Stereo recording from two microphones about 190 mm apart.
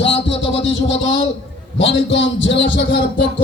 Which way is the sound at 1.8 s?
75° left (ahead or behind).